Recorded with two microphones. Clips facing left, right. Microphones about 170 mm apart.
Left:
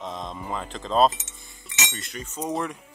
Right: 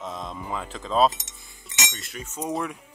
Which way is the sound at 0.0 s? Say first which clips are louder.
Even; 5° right (ahead or behind).